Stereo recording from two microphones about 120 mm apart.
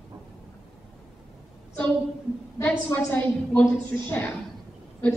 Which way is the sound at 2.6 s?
15° left (ahead or behind).